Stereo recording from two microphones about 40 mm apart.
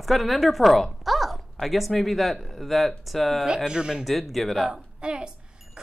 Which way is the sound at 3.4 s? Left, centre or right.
Right.